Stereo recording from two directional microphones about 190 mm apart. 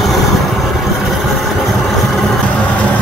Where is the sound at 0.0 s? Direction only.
Centre (ahead or behind).